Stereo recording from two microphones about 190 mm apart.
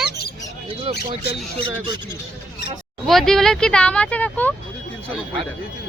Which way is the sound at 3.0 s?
Centre (ahead or behind).